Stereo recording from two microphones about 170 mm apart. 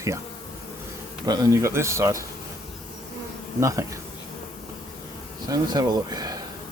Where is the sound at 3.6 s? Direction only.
20° right (ahead or behind).